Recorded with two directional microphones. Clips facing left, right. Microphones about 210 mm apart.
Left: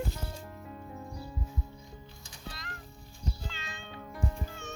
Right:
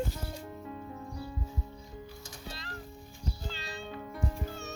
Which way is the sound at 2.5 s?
30° right (ahead or behind).